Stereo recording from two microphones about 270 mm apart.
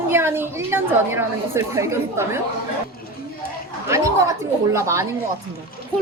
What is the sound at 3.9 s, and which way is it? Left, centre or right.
A woman's voice, centre.